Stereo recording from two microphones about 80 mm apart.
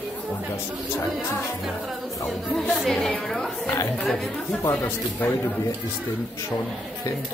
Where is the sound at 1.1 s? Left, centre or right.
Centre.